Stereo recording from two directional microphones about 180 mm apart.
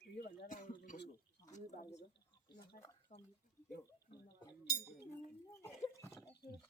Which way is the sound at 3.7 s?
65° left (ahead or behind).